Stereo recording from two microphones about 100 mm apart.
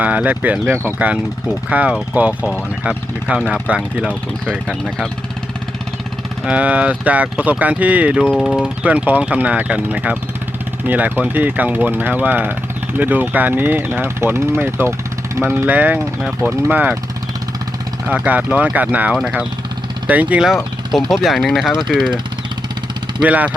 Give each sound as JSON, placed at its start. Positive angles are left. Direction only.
{"t": 0.0, "sound": "speech", "side_deg": -15}
{"t": 6.4, "sound": "speech", "side_deg": -15}
{"t": 18.1, "sound": "speech", "side_deg": -15}
{"t": 21.1, "sound": "speech", "side_deg": 0}
{"t": 23.2, "sound": "speech", "side_deg": -15}